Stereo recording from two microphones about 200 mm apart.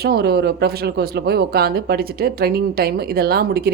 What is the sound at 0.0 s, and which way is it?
A woman's voice, 55° right (ahead or behind).